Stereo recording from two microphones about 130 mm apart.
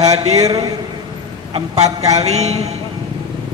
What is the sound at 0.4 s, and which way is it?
Speech, 30° right (ahead or behind).